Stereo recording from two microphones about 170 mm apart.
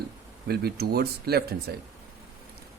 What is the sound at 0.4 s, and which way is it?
Speech, 70° right (ahead or behind).